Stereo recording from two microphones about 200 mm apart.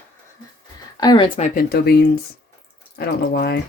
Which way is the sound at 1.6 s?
50° left (ahead or behind).